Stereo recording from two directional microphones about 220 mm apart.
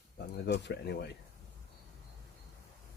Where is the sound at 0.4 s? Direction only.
50° left (ahead or behind).